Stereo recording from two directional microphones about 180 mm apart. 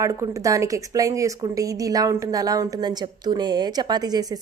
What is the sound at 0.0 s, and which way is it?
A woman's voice, 15° right (ahead or behind).